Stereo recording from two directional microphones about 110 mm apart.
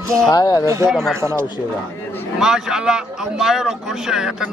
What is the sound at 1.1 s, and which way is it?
Speech, 25° right (ahead or behind).